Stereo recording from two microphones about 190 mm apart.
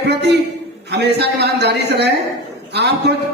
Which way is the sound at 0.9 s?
60° right (ahead or behind).